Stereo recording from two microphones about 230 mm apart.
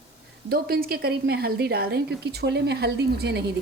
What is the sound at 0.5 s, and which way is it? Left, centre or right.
A woman's voice, right.